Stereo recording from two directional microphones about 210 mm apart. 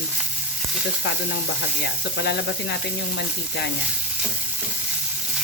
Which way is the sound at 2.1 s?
55° left (ahead or behind).